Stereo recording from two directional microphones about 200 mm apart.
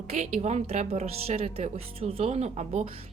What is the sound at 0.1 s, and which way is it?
Speech, 35° right (ahead or behind).